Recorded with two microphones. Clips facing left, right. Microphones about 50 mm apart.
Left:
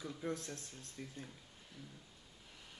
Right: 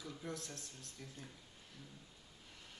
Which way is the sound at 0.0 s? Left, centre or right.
Left.